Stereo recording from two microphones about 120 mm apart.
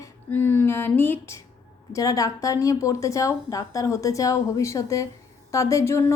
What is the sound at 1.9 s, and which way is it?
A woman's voice, 30° left (ahead or behind).